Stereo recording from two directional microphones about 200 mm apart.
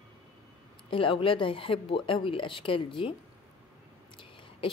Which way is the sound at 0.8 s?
25° left (ahead or behind).